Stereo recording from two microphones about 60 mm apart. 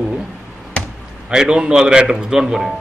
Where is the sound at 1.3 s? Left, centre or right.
Centre.